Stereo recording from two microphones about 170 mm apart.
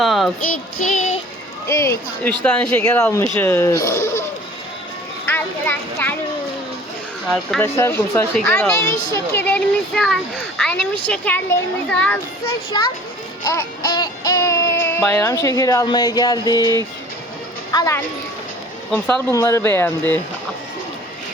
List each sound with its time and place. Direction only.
0.0 s child singing: centre (ahead or behind)
0.8 s child singing: 50° left (ahead or behind)
1.6 s speech: 15° left (ahead or behind)
5.2 s a child's voice: 10° left (ahead or behind)
7.6 s speech: 15° left (ahead or behind)
12.7 s a child's voice: 25° left (ahead or behind)
13.4 s music: 20° left (ahead or behind)
17.7 s speech: 20° left (ahead or behind)
18.9 s speech: 10° left (ahead or behind)
19.3 s speech: 20° left (ahead or behind)